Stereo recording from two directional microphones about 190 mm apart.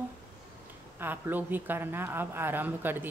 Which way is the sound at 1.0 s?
10° right (ahead or behind).